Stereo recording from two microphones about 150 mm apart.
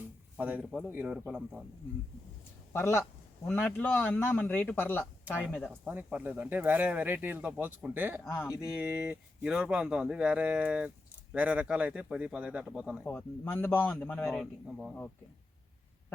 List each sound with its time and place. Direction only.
0.3 s speech: 10° right (ahead or behind)
2.7 s a man's voice: 15° left (ahead or behind)
5.8 s speech: 10° right (ahead or behind)
13.1 s a man's voice: 10° left (ahead or behind); by 14.9 s 5° right (ahead or behind)